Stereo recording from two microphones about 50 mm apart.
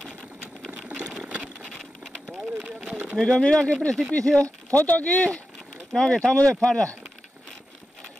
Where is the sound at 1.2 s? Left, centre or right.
Right.